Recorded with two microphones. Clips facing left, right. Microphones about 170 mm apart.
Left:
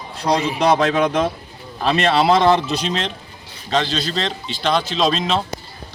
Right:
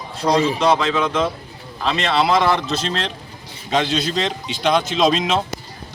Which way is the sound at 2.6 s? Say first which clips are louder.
Left 1 dB; centre (ahead or behind).